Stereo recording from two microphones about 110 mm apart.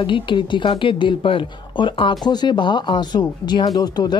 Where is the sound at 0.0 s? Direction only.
50° left (ahead or behind).